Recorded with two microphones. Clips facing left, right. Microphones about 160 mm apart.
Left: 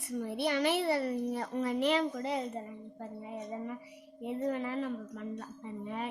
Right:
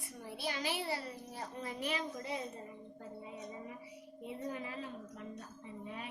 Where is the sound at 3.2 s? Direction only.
60° left (ahead or behind).